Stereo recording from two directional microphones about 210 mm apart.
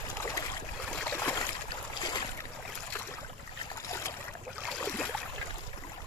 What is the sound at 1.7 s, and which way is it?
Boat, 20° left (ahead or behind).